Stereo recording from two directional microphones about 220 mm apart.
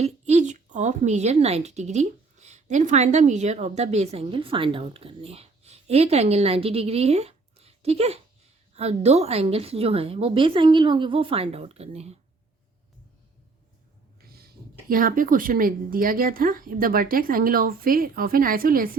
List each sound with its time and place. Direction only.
0.0 s a woman's voice: 30° right (ahead or behind)
14.2 s speech: 45° right (ahead or behind)